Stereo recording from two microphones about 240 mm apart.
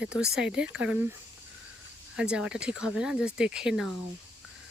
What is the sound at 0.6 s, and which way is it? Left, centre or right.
Speech, right.